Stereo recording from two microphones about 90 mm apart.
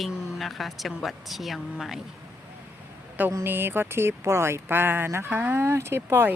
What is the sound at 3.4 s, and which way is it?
Speech, 25° right (ahead or behind).